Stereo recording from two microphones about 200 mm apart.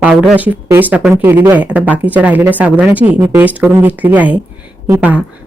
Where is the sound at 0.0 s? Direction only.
5° right (ahead or behind).